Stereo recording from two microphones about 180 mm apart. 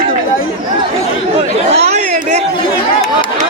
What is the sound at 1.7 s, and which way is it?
Chatter, 40° right (ahead or behind).